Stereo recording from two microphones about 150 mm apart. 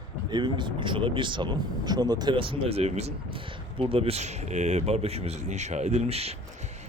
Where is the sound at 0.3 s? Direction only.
30° right (ahead or behind).